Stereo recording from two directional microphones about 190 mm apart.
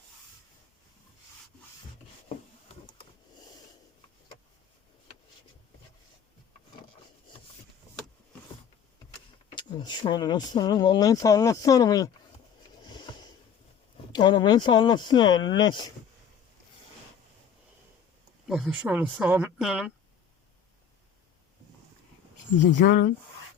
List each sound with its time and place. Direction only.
9.6 s speech: 25° left (ahead or behind)
12.8 s a sound: 25° left (ahead or behind)
13.9 s speech: 25° left (ahead or behind)
18.4 s speech: centre (ahead or behind)
22.8 s speech: 45° left (ahead or behind)